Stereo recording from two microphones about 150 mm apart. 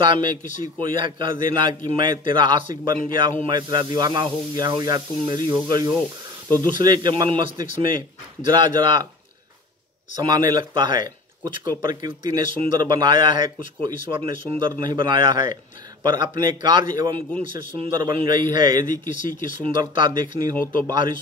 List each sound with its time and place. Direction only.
0.0 s speech: 30° right (ahead or behind)
10.2 s speech: 30° right (ahead or behind)